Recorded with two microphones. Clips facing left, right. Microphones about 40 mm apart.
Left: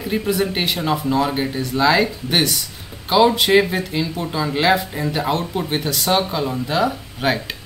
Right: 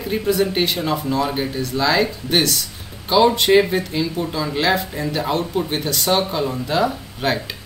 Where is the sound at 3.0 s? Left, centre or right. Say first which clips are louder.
Even; centre.